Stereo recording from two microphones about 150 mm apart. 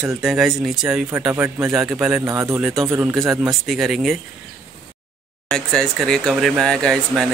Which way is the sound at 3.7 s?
Centre (ahead or behind).